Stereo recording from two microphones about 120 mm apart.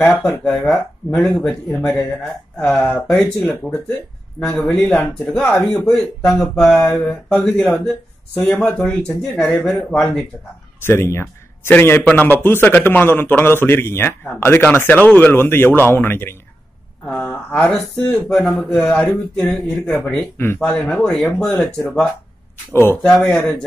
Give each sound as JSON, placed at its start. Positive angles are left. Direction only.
{"t": 0.0, "sound": "a man's voice", "side_deg": 10}
{"t": 10.8, "sound": "a man's voice", "side_deg": 20}